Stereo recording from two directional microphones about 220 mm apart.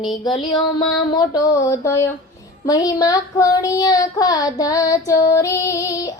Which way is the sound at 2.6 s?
15° left (ahead or behind).